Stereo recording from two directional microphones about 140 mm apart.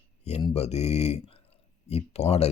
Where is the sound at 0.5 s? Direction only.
50° left (ahead or behind).